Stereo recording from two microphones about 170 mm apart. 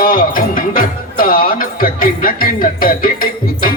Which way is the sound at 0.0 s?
55° left (ahead or behind).